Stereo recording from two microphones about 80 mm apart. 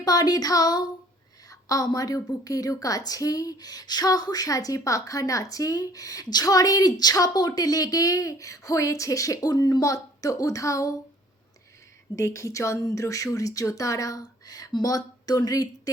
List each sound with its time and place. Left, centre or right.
0.0 s a woman's voice: left
12.1 s a woman's voice: left